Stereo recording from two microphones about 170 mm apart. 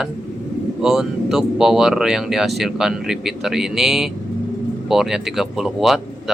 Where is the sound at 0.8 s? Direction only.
Centre (ahead or behind).